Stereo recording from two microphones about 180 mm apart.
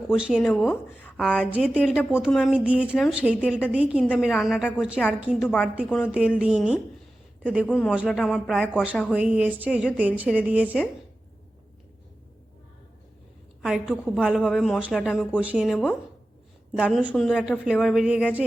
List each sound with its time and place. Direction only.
0.1 s a woman's voice: 5° right (ahead or behind)
1.8 s a woman's voice: 5° left (ahead or behind)
13.6 s a woman's voice: 5° right (ahead or behind)
15.6 s a woman's voice: 5° left (ahead or behind)
17.1 s a woman's voice: centre (ahead or behind)